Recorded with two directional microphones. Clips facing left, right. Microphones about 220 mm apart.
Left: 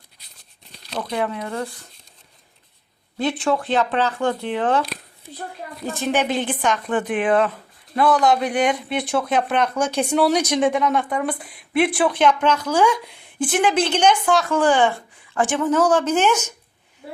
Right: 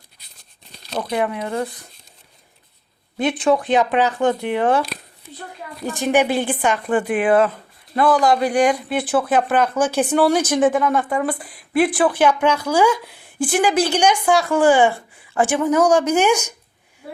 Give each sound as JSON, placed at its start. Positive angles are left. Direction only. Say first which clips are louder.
{"t": 0.9, "sound": "speech", "louder": "right 3 dB", "side_deg": -15}
{"t": 3.2, "sound": "speech", "louder": "right 3 dB", "side_deg": -20}
{"t": 5.8, "sound": "speech", "louder": "right 4 dB", "side_deg": -15}